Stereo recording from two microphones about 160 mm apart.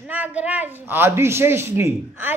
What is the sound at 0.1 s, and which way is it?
A woman's voice, 10° right (ahead or behind).